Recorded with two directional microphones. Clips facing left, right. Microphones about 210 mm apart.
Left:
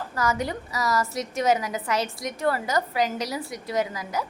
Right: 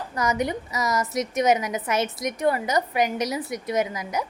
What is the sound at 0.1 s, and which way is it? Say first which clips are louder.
A woman's voice: right 2 dB; 20° right (ahead or behind).